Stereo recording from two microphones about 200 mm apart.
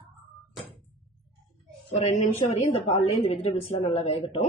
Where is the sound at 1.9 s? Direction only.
30° left (ahead or behind).